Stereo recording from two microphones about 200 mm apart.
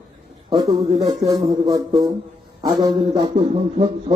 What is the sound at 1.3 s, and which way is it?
Speech, 20° right (ahead or behind).